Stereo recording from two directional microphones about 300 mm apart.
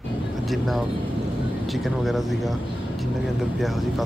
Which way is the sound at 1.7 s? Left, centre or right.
Centre.